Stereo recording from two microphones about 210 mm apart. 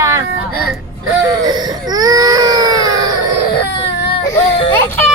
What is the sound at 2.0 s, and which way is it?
Baby cry, 15° right (ahead or behind).